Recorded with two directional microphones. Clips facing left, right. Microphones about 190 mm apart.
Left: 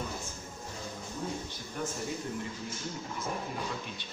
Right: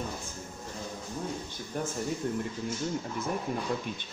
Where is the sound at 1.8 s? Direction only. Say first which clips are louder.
Right 3 dB; 40° right (ahead or behind).